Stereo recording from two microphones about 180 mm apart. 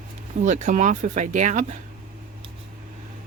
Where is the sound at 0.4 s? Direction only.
40° right (ahead or behind).